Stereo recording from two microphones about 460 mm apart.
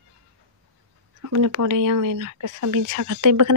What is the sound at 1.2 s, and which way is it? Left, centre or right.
Speech, right.